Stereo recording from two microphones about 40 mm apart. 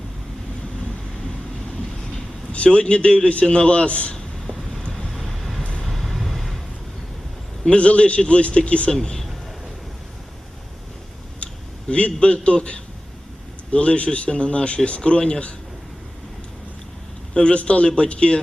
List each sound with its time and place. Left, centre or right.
2.7 s a man's voice: left
4.1 s a sound: centre
4.9 s vehicle: centre
7.7 s a man's voice: left
8.9 s a man's voice: centre
11.9 s a man's voice: left
13.7 s a man's voice: left
17.3 s a man's voice: left